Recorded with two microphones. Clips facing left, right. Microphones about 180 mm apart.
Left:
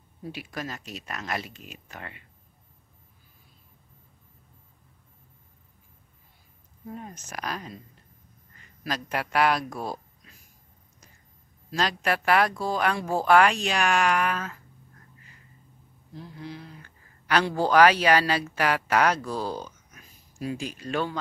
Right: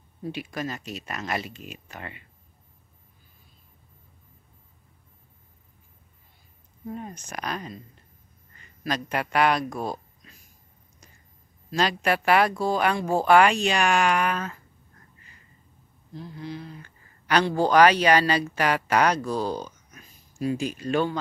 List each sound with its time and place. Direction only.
0.3 s speech: centre (ahead or behind)
6.9 s speech: centre (ahead or behind)
8.8 s a man's voice: centre (ahead or behind)
11.7 s speech: centre (ahead or behind)
16.2 s speech: 5° left (ahead or behind)